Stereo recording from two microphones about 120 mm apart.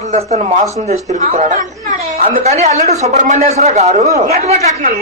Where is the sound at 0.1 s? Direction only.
65° right (ahead or behind).